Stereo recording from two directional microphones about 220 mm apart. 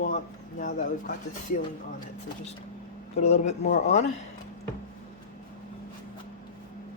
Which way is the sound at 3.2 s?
30° left (ahead or behind).